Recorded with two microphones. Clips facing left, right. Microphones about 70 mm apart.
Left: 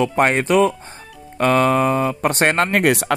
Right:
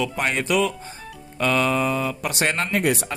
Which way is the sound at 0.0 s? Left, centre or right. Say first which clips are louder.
Left 7 dB; left.